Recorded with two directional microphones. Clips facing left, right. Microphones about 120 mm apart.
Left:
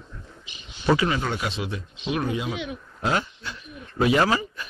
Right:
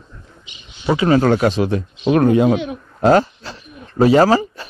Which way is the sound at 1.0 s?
50° right (ahead or behind).